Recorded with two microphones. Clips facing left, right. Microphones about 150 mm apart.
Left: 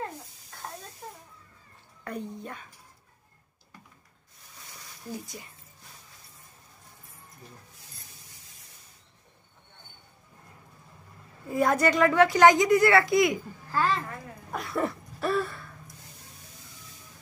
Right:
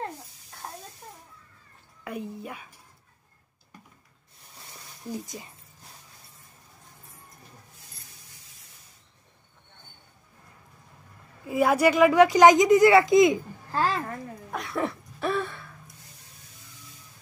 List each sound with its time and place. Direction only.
2.0 s speech: 5° right (ahead or behind)
5.1 s speech: 20° right (ahead or behind)
11.4 s speech: 5° right (ahead or behind); by 13.8 s 25° right (ahead or behind)
14.5 s a sound: centre (ahead or behind)